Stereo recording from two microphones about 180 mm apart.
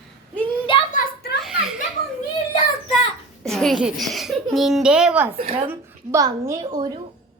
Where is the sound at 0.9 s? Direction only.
50° left (ahead or behind).